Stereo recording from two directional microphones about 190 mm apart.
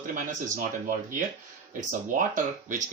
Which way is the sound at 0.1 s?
45° right (ahead or behind).